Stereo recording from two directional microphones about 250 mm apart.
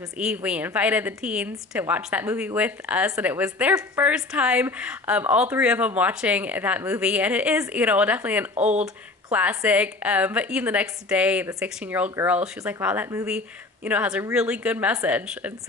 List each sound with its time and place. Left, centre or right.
0.2 s a woman's voice: centre
8.5 s speech: right
9.3 s a woman's voice: centre